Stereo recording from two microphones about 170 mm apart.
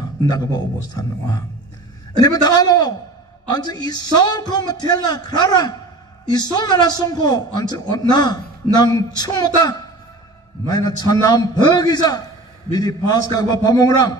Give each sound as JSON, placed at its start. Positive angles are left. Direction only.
{"t": 0.3, "sound": "a man's voice", "side_deg": 25}
{"t": 2.1, "sound": "a man's voice", "side_deg": 20}